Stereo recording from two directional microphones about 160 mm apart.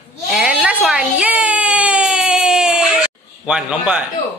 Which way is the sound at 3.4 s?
5° right (ahead or behind).